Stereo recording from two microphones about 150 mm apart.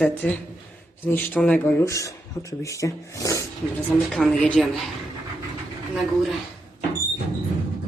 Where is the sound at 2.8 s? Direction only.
20° left (ahead or behind).